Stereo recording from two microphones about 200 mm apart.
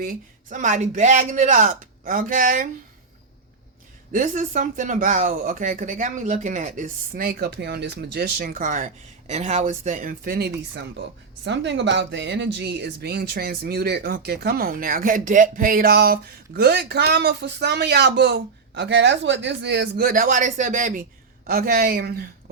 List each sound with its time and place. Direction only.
0.0 s speech: 40° right (ahead or behind)
4.1 s speech: 40° right (ahead or behind)
11.4 s speech: 65° right (ahead or behind)